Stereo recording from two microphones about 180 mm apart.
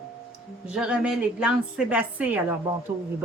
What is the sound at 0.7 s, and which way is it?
A woman's voice, 5° right (ahead or behind).